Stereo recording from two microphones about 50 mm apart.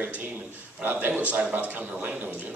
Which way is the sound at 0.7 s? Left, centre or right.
Right.